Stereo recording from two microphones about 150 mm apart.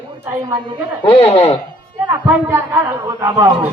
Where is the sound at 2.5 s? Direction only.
15° right (ahead or behind).